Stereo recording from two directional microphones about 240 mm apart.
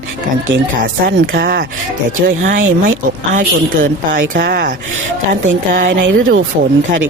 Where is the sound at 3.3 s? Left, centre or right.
Right.